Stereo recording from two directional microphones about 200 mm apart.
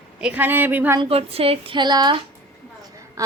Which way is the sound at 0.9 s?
30° right (ahead or behind).